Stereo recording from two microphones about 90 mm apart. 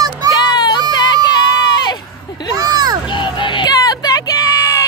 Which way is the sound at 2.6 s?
45° right (ahead or behind).